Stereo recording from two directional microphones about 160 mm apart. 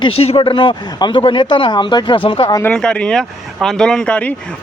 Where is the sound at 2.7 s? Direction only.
5° left (ahead or behind).